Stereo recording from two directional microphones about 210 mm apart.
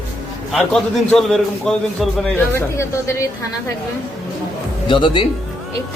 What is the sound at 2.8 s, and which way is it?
Speech, 15° left (ahead or behind).